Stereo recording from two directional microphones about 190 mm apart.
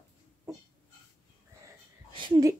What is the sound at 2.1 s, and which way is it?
Speech, 25° right (ahead or behind).